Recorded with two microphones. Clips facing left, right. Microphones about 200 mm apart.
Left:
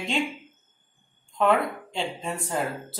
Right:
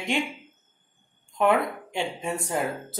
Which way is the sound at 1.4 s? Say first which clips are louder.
Even; 15° right (ahead or behind).